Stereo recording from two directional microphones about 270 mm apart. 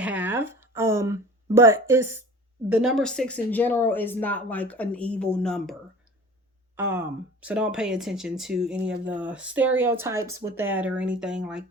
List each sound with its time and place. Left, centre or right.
0.0 s a sound: centre
2.6 s speech: centre
6.7 s speech: centre